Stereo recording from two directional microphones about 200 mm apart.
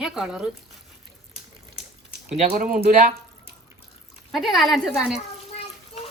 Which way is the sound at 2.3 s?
30° right (ahead or behind).